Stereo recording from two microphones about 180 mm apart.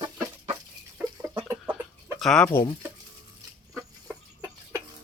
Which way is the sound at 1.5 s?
10° right (ahead or behind).